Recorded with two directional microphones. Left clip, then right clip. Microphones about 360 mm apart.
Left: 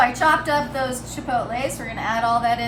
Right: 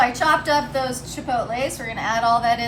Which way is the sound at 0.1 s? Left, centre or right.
Centre.